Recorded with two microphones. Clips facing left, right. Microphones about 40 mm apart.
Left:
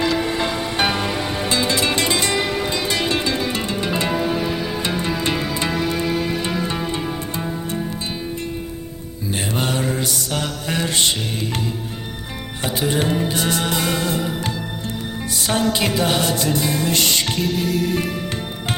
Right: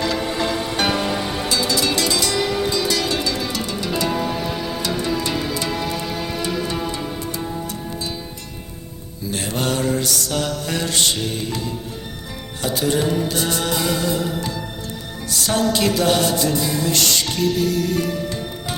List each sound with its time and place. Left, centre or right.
0.0 s music: centre
1.5 s music: left
4.1 s music: centre
4.8 s music: left
9.6 s mantra: centre
13.1 s music: left
13.7 s music: left
15.3 s music: centre
16.5 s music: left
16.9 s music: left